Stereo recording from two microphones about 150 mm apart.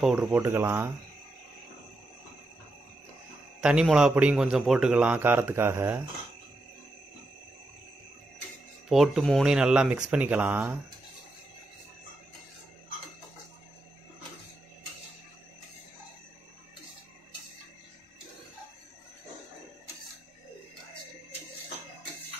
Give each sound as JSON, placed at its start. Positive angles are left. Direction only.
{"t": 0.0, "sound": "a man's voice", "side_deg": -5}
{"t": 3.6, "sound": "a man's voice", "side_deg": -5}
{"t": 8.8, "sound": "speech", "side_deg": 0}